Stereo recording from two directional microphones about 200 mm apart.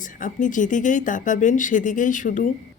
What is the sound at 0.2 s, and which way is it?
Speech, 40° left (ahead or behind).